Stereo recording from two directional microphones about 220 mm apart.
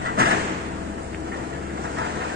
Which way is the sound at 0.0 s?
45° right (ahead or behind).